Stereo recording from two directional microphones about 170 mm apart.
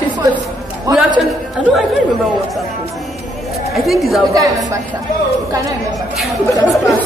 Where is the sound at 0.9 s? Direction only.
20° right (ahead or behind).